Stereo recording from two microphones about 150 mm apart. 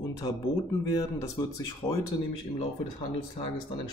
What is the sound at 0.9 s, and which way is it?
Speech, 20° left (ahead or behind).